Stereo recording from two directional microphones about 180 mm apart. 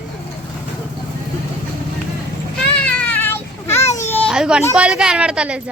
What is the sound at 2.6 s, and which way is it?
Child singing, 5° left (ahead or behind).